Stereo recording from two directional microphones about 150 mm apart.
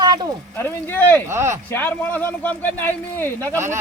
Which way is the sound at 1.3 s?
15° right (ahead or behind).